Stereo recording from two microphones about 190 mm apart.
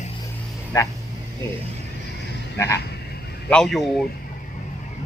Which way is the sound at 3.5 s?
5° left (ahead or behind).